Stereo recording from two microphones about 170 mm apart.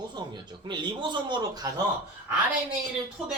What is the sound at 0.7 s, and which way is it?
Speech, 25° right (ahead or behind).